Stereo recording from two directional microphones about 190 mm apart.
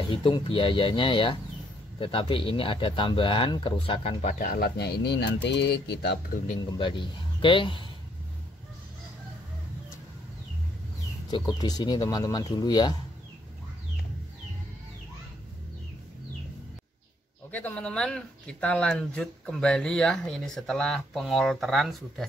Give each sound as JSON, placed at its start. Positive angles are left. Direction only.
{"t": 0.1, "sound": "speech", "side_deg": 25}
{"t": 4.5, "sound": "speech", "side_deg": 55}
{"t": 6.6, "sound": "speech", "side_deg": 25}
{"t": 11.2, "sound": "speech", "side_deg": 25}
{"t": 17.5, "sound": "speech", "side_deg": 10}